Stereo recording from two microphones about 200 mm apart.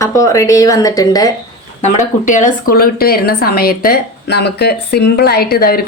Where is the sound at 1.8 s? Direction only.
40° left (ahead or behind).